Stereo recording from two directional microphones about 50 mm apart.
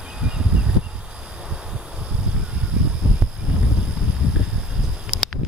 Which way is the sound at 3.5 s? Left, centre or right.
Right.